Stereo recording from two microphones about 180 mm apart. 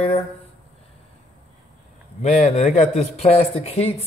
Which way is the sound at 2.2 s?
40° left (ahead or behind).